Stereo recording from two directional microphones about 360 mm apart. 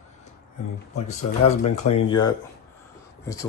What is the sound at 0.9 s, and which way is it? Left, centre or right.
Speech, centre.